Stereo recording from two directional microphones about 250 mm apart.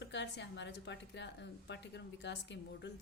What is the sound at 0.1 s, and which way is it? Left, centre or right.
Speech, left.